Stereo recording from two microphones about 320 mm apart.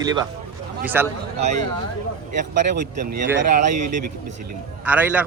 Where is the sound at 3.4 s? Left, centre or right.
Right.